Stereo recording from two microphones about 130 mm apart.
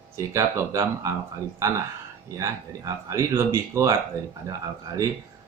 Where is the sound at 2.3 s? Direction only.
25° right (ahead or behind).